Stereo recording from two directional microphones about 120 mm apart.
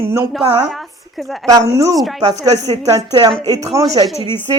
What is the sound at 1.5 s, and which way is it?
Speech, 30° right (ahead or behind).